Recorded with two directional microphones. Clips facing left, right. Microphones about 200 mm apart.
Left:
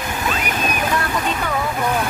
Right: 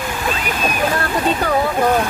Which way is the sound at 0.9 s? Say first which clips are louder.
Right 3 dB; 35° right (ahead or behind).